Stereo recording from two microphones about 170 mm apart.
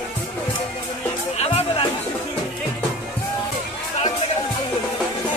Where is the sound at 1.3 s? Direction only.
35° left (ahead or behind).